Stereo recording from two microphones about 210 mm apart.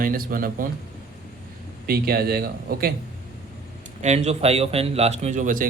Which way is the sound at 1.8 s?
45° right (ahead or behind).